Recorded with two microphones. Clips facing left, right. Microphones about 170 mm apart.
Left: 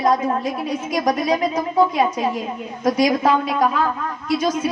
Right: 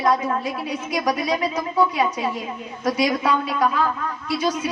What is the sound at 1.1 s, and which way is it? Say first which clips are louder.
Speech: left 3 dB; 45° left (ahead or behind).